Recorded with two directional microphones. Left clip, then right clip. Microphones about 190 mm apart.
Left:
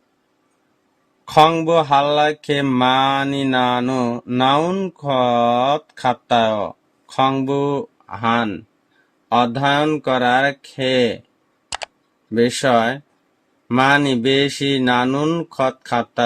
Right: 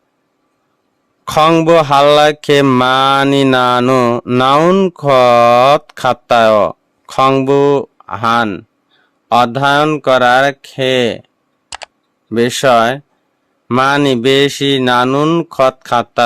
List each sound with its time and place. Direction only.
1.2 s mantra: 55° right (ahead or behind); by 11.2 s 40° right (ahead or behind)
11.7 s camera: centre (ahead or behind)
12.3 s mantra: 45° right (ahead or behind)